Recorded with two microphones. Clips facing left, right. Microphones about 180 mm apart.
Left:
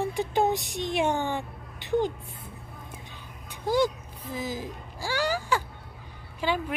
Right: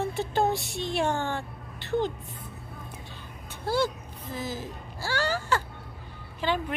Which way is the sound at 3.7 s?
15° left (ahead or behind).